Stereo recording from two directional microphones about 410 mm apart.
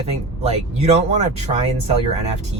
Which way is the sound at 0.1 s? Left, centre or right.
Centre.